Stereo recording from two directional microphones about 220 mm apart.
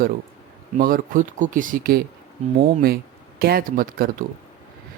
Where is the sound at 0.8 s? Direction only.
40° right (ahead or behind).